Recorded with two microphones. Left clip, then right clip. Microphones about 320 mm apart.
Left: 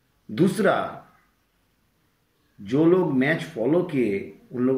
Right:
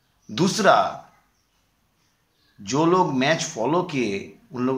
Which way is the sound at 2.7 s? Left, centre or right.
Right.